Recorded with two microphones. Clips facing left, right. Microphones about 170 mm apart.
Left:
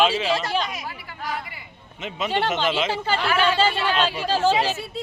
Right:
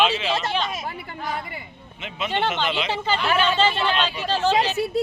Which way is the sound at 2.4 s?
40° left (ahead or behind).